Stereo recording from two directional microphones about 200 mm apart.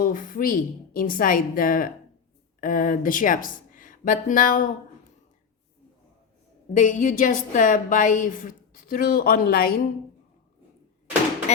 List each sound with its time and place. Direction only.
0.0 s a woman's voice: 45° left (ahead or behind)
6.7 s a woman's voice: 40° left (ahead or behind)